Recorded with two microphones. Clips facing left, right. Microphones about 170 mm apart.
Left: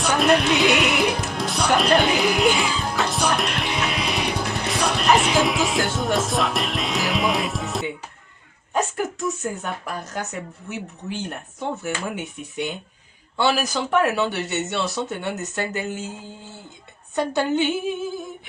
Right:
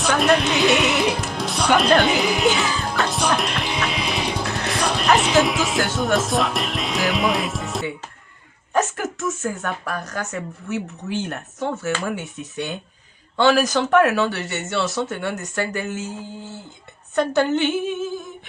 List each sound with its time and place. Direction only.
0.1 s speech: centre (ahead or behind)
2.6 s music: centre (ahead or behind)
8.7 s a woman's voice: 15° left (ahead or behind)
17.2 s a woman's voice: 15° left (ahead or behind)